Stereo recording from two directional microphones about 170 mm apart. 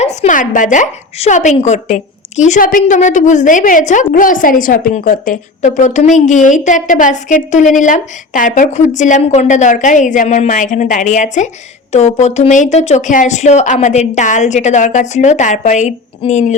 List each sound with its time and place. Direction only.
0.0 s a woman's voice: 45° left (ahead or behind)